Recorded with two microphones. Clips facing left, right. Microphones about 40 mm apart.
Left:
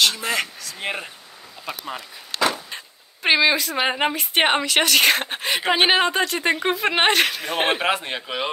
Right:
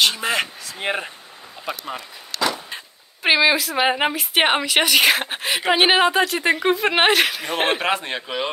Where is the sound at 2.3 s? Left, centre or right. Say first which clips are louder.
Left 1 dB; left.